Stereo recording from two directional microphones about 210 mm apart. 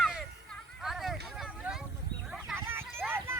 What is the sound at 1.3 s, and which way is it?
Vehicle, centre (ahead or behind).